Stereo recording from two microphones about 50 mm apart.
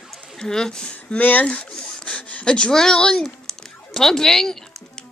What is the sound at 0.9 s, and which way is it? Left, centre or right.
Speech, left.